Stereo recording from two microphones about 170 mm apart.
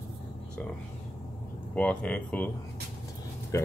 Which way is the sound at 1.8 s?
10° left (ahead or behind).